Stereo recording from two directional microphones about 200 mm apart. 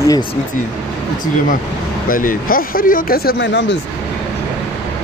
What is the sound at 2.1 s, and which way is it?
Speech, 45° left (ahead or behind).